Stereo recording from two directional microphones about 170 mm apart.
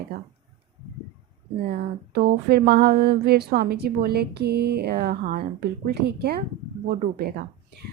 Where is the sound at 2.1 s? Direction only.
70° right (ahead or behind).